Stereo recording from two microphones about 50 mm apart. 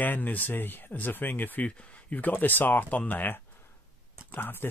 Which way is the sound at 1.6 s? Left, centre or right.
Left.